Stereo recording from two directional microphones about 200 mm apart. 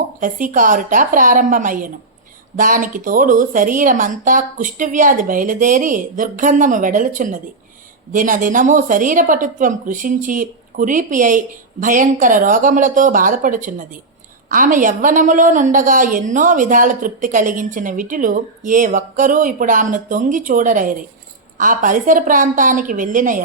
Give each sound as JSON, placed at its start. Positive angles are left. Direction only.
{"t": 0.2, "sound": "a woman's voice", "side_deg": -40}